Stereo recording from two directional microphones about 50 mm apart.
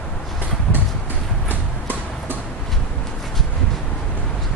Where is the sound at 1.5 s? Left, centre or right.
Right.